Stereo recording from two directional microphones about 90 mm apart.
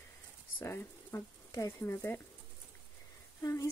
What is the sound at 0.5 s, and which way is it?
Speech, 30° left (ahead or behind).